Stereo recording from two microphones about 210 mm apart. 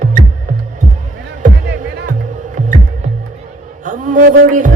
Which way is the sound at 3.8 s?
35° right (ahead or behind).